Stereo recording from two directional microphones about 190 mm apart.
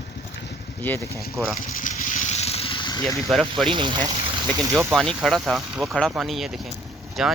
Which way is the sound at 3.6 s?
25° right (ahead or behind).